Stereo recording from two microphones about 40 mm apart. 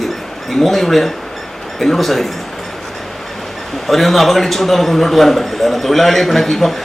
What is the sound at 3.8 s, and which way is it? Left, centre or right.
A man's voice, centre.